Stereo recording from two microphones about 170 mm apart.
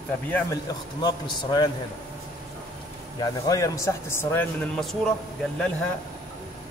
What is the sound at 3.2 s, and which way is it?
A man's voice, 20° left (ahead or behind).